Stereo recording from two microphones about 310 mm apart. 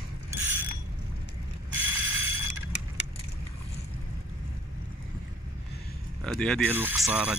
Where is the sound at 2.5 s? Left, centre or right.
Left.